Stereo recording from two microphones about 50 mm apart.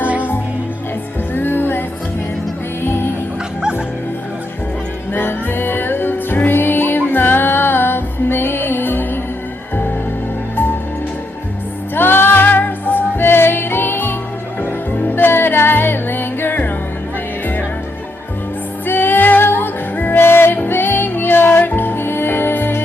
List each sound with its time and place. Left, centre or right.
1.3 s music: left
2.8 s music: left
5.1 s music: left
11.9 s music: left
18.9 s music: left